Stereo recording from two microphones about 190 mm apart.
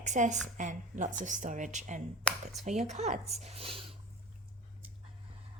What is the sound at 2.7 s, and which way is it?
Speech, 35° right (ahead or behind).